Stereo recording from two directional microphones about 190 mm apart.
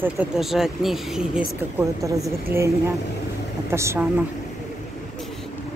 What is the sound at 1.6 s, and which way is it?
Speech, 15° right (ahead or behind).